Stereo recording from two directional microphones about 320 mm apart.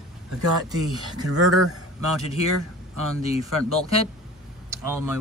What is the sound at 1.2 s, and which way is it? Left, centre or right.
Speech, right.